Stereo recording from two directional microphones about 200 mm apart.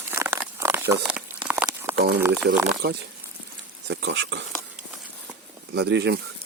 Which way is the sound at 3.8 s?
60° right (ahead or behind).